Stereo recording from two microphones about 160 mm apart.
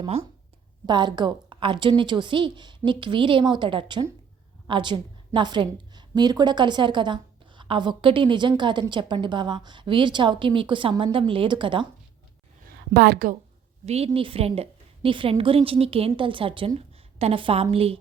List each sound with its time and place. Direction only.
0.9 s a woman's voice: 30° right (ahead or behind)
12.6 s a woman's voice: 75° right (ahead or behind)
13.8 s a woman's voice: 40° right (ahead or behind)